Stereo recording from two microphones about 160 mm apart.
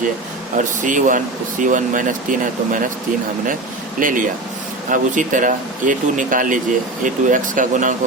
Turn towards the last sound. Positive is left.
turn(degrees=-55)  # may be behind; listen again after turning